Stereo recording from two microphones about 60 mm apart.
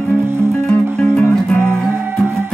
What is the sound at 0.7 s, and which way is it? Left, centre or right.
Music, left.